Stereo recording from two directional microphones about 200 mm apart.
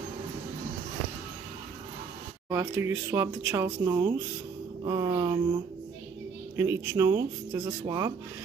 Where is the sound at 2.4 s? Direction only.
15° right (ahead or behind).